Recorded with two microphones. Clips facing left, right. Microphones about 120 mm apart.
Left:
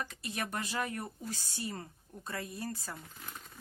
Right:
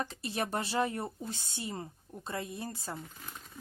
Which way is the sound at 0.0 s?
30° right (ahead or behind).